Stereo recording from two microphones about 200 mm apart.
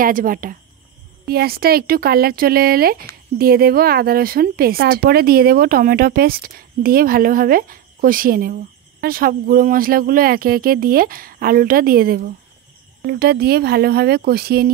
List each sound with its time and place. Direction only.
0.0 s speech: 45° right (ahead or behind)